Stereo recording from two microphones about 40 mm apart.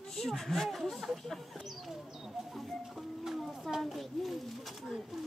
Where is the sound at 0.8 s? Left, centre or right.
Centre.